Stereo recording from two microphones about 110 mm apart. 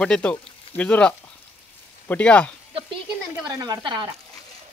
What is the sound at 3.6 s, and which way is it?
Speech, 40° right (ahead or behind).